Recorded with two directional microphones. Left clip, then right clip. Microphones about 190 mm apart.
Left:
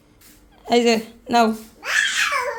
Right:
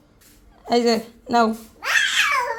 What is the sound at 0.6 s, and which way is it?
Speech, centre (ahead or behind).